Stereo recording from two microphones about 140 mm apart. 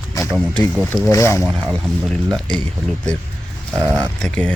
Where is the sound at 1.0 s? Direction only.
20° left (ahead or behind).